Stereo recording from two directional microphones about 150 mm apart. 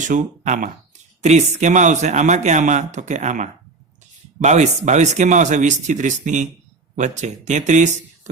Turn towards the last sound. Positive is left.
turn(degrees=-55)  # may be behind; listen again after turning